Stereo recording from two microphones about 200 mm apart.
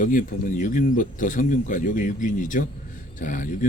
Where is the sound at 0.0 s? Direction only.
40° left (ahead or behind).